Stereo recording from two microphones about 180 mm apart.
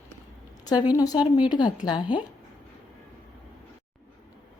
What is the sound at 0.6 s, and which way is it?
A woman's voice, 20° left (ahead or behind).